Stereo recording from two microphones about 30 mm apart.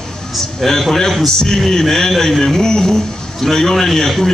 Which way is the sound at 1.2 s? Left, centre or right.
Centre.